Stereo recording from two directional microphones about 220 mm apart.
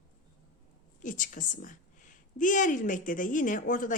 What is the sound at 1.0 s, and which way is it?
Speech, 35° left (ahead or behind).